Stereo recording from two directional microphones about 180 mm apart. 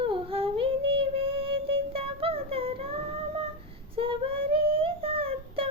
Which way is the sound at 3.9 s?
30° right (ahead or behind).